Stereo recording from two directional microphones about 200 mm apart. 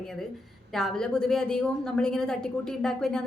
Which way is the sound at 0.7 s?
Centre (ahead or behind).